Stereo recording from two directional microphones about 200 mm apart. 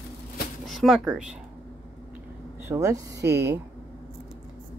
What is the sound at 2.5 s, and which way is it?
Speech, 15° right (ahead or behind).